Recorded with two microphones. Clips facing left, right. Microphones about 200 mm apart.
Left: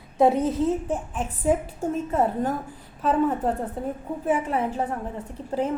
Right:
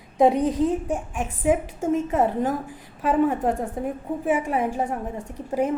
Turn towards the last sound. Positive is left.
turn(degrees=-10)  # may be behind; listen again after turning